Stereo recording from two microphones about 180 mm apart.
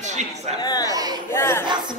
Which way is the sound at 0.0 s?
40° right (ahead or behind).